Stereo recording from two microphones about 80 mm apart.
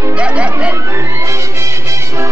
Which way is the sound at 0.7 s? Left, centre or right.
Right.